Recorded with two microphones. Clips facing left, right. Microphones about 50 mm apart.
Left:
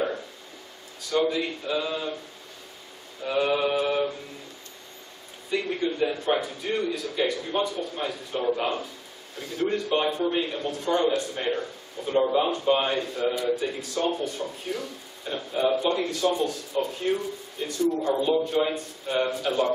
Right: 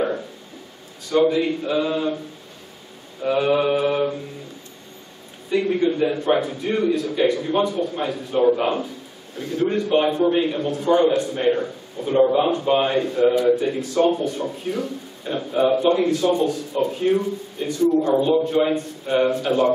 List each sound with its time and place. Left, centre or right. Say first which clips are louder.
1.1 s a man's voice: right 7 dB; centre
3.3 s a man's voice: right 5 dB; centre
5.5 s a man's voice: right 7 dB; centre
17.6 s a man's voice: right 6 dB; centre